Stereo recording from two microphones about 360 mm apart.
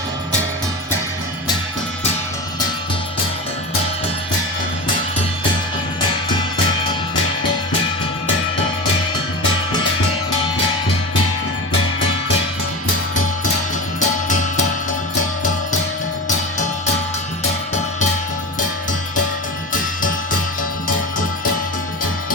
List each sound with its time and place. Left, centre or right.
14.0 s music: left